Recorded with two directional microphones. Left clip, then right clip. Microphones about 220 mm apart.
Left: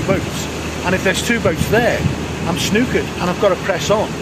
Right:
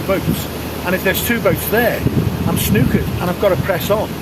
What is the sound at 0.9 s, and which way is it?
Speech, 15° left (ahead or behind).